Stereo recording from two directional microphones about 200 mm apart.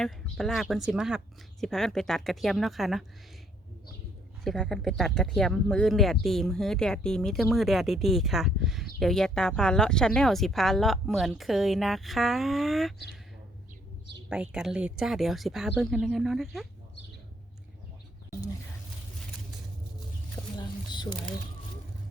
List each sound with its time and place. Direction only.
0.0 s speech: centre (ahead or behind)
4.4 s speech: centre (ahead or behind)
14.3 s speech: 5° right (ahead or behind)
20.6 s a sound: 20° left (ahead or behind)